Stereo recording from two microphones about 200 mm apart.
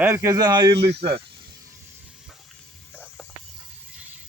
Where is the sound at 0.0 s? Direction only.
15° right (ahead or behind).